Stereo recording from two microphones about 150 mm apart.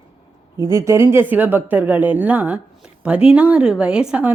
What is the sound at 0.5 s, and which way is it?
Speech, 20° right (ahead or behind).